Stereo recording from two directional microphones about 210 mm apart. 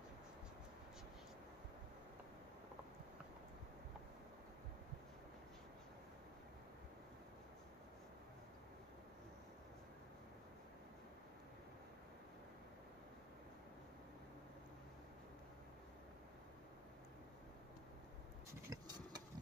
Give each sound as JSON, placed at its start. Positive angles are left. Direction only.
{"t": 18.7, "sound": "engine", "side_deg": -20}